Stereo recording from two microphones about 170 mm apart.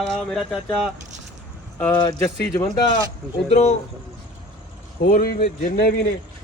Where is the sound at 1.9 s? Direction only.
25° left (ahead or behind).